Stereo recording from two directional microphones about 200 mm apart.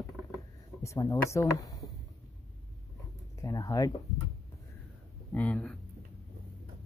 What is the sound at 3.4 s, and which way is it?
Speech, 15° left (ahead or behind).